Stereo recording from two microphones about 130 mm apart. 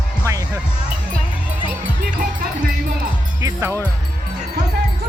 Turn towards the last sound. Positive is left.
turn(degrees=-25)  # may be behind; listen again after turning